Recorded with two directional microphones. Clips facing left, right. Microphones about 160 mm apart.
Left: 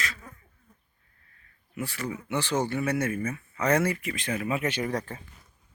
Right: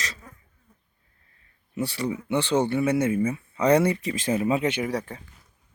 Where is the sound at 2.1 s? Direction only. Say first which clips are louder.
Right 4 dB; 25° right (ahead or behind).